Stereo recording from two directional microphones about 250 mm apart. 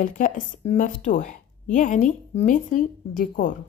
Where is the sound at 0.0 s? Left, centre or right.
Left.